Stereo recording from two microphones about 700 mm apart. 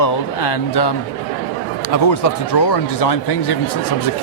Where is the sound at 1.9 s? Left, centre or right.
Left.